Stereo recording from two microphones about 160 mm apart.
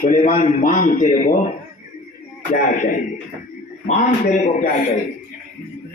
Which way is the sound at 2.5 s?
60° left (ahead or behind).